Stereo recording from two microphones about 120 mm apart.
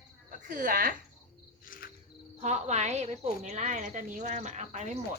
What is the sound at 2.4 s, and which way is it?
A woman's voice, 70° right (ahead or behind).